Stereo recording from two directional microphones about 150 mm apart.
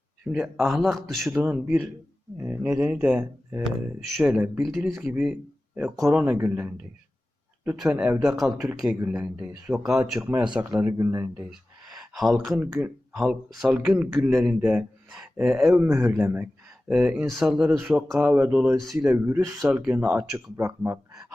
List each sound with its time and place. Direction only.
0.3 s speech: centre (ahead or behind)
1.4 s speech: 10° right (ahead or behind)
4.9 s speech: 15° right (ahead or behind)
7.8 s speech: 5° right (ahead or behind)
11.9 s a sound: centre (ahead or behind)
13.1 s speech: 5° right (ahead or behind); by 21.0 s 20° right (ahead or behind)
21.1 s a sound: 5° right (ahead or behind)